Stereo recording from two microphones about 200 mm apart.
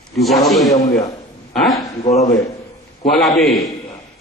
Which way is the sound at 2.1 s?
35° left (ahead or behind).